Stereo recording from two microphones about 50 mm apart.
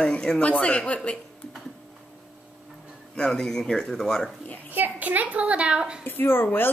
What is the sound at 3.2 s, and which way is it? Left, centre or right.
Speech, centre.